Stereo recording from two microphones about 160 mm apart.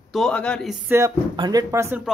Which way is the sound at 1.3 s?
30° right (ahead or behind).